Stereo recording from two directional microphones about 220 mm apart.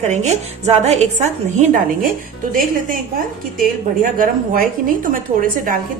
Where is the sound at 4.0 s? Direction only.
40° right (ahead or behind).